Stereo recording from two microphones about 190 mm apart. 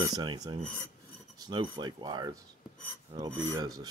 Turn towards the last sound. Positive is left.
turn(degrees=-20)  # may be behind; listen again after turning